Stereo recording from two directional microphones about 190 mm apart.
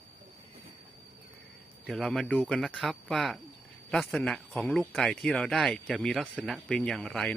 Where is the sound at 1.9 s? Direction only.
Centre (ahead or behind).